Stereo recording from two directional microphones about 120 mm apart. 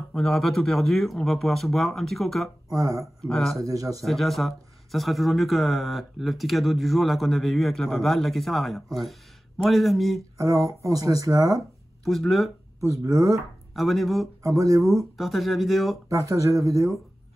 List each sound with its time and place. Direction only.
0.1 s speech: centre (ahead or behind)
2.7 s speech: 25° right (ahead or behind)
3.2 s speech: 5° left (ahead or behind)
3.6 s speech: 30° right (ahead or behind)
4.0 s speech: centre (ahead or behind)
10.3 s speech: 25° right (ahead or behind)
12.0 s speech: centre (ahead or behind)
13.7 s speech: centre (ahead or behind)
14.4 s speech: 25° right (ahead or behind)
15.0 s speech: centre (ahead or behind)
16.1 s speech: 25° right (ahead or behind)